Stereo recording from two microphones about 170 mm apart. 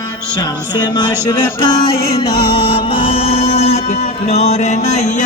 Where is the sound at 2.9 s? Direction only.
35° left (ahead or behind).